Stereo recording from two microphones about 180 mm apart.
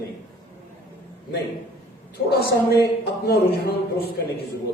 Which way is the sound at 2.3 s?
60° left (ahead or behind).